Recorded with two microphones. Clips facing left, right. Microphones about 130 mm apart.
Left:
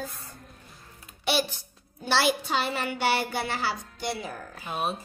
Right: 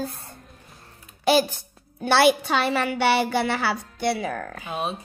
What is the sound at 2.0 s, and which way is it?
Speech, 65° right (ahead or behind).